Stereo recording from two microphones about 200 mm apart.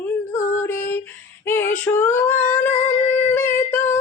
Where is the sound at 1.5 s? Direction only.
10° left (ahead or behind).